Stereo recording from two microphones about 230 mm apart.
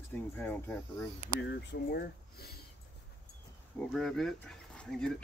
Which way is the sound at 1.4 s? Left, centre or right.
Left.